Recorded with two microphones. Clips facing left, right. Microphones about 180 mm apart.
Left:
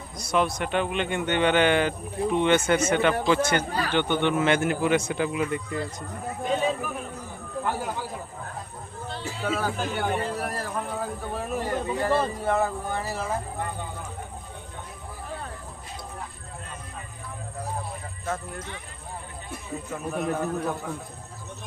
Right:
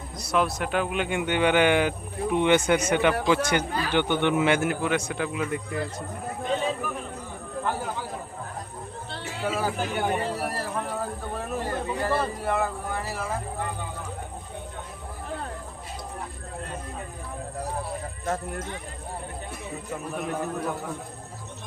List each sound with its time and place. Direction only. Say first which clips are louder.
0.2 s speech: even; centre (ahead or behind)
4.8 s speech: left 3 dB; centre (ahead or behind)
9.4 s speech: right 1 dB; 10° right (ahead or behind)
11.5 s speech: left 2 dB; 15° left (ahead or behind)
18.3 s speech: right 2 dB; 45° right (ahead or behind)
20.1 s speech: left 3 dB; centre (ahead or behind)